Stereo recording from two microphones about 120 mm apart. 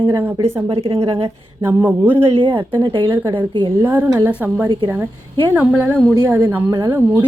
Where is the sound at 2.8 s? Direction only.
40° right (ahead or behind).